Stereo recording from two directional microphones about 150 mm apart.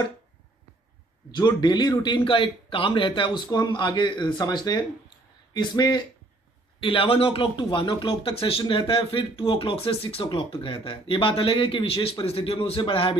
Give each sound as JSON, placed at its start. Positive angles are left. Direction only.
{"t": 1.3, "sound": "speech", "side_deg": 30}